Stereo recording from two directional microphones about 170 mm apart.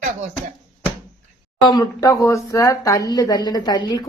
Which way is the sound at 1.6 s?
25° left (ahead or behind).